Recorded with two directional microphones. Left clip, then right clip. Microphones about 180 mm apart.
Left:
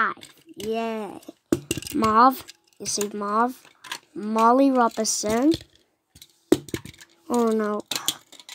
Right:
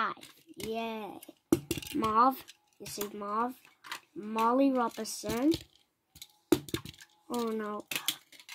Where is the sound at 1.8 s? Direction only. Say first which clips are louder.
Left 9 dB; 30° left (ahead or behind).